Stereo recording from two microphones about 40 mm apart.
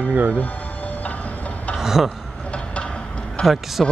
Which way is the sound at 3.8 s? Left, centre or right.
Centre.